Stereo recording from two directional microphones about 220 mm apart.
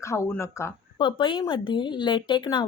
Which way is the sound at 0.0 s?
15° left (ahead or behind).